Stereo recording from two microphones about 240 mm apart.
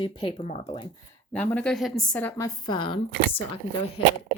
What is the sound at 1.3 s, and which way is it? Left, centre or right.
Speech, centre.